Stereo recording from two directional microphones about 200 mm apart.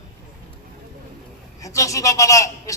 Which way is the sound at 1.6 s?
15° left (ahead or behind).